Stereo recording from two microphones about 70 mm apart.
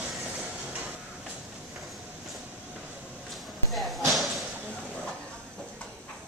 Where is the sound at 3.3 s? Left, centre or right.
Centre.